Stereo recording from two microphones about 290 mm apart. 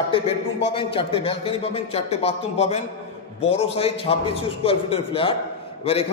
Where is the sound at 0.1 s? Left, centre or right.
Centre.